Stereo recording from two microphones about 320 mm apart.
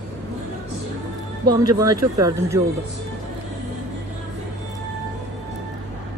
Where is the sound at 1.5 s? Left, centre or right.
Centre.